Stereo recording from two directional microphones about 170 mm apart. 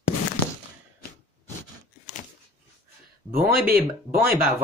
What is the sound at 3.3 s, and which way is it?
Speech, 60° right (ahead or behind).